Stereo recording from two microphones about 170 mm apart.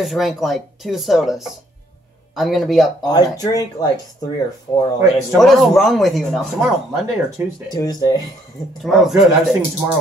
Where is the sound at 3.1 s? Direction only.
20° left (ahead or behind).